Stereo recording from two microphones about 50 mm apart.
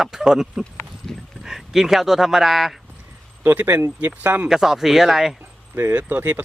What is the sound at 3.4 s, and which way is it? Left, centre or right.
Speech, right.